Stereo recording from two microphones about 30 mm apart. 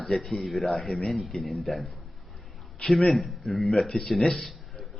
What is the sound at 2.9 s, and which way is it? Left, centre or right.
A man's voice, centre.